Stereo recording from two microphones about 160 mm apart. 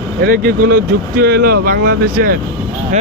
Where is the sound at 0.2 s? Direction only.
70° right (ahead or behind).